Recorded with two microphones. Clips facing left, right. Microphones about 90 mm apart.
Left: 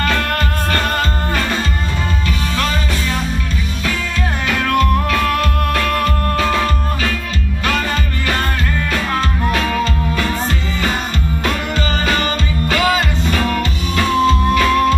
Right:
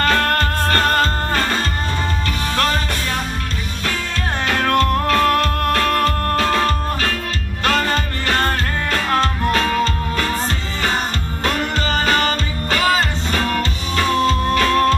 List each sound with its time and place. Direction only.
0.0 s music: 45° right (ahead or behind)
4.5 s music: 40° right (ahead or behind)
7.6 s music: 40° right (ahead or behind)
11.4 s music: 40° right (ahead or behind)